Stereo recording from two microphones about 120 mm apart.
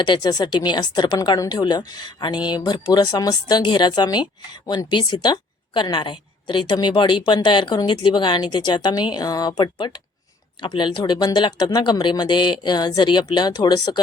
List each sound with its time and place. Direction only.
0.0 s a woman's voice: 35° left (ahead or behind)